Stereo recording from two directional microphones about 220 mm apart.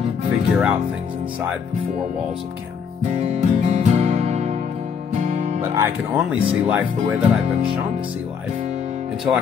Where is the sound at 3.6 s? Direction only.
30° right (ahead or behind).